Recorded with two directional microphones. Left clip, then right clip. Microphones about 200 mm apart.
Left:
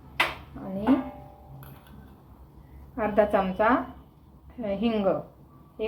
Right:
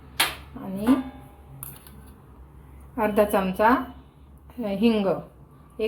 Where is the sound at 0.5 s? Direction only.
55° right (ahead or behind).